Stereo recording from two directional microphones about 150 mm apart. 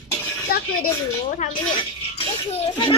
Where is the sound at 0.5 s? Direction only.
75° left (ahead or behind).